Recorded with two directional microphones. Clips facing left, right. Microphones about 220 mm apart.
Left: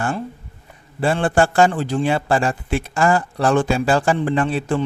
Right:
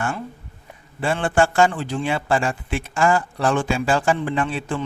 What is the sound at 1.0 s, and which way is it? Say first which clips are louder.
A man's voice: left 2 dB; 35° left (ahead or behind).